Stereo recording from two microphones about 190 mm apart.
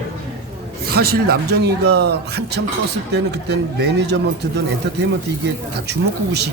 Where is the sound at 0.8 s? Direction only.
55° right (ahead or behind).